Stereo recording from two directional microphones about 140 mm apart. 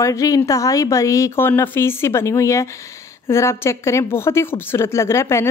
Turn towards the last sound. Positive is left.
turn(degrees=20)  # may be behind; listen again after turning